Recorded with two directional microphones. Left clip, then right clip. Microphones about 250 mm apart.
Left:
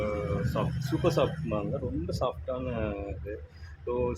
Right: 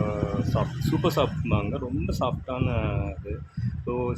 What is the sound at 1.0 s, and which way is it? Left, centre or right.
A man's voice, right.